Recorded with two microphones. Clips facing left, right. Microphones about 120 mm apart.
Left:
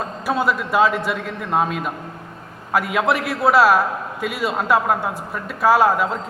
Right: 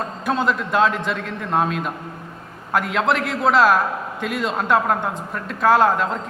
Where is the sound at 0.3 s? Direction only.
5° left (ahead or behind).